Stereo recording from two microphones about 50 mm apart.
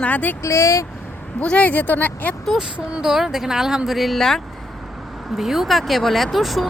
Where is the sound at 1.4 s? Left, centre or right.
Left.